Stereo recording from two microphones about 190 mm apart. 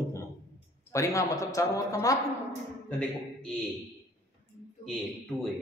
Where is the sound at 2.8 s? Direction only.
5° left (ahead or behind).